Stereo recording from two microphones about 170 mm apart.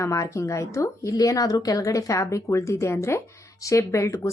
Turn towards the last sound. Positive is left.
turn(degrees=15)  # may be behind; listen again after turning